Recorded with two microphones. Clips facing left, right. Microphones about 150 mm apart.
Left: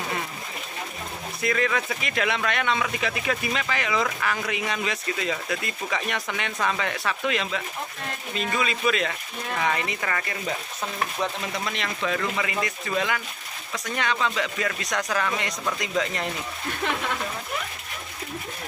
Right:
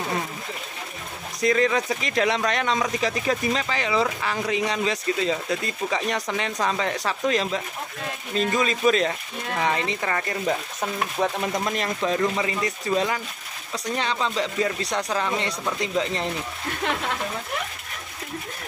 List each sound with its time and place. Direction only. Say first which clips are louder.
1.4 s speech: right 4 dB; 30° right (ahead or behind)
10.8 s stir: right 3 dB; 45° right (ahead or behind)
11.7 s speech: right 4 dB; 35° right (ahead or behind)